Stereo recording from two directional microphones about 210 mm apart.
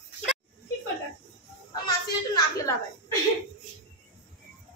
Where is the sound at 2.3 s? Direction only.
15° left (ahead or behind).